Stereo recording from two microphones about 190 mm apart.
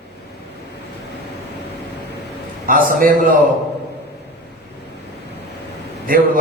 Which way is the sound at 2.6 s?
45° right (ahead or behind).